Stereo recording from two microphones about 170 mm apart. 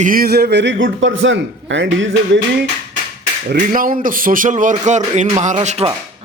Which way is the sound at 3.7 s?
55° right (ahead or behind).